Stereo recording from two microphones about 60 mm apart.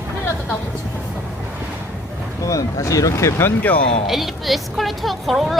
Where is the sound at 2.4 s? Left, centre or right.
Left.